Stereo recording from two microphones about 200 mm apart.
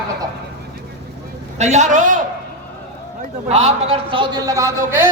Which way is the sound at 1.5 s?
35° right (ahead or behind).